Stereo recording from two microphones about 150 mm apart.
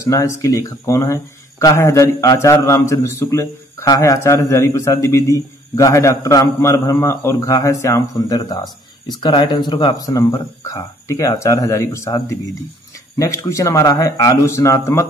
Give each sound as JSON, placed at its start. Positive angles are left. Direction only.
{"t": 0.0, "sound": "speech", "side_deg": 20}